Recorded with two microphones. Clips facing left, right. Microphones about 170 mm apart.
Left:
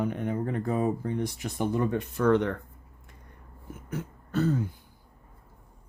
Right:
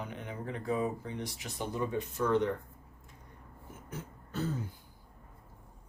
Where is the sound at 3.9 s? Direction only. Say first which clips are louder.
Left 10 dB; 70° left (ahead or behind).